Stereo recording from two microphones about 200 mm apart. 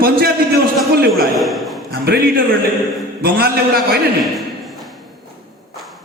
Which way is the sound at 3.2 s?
50° right (ahead or behind).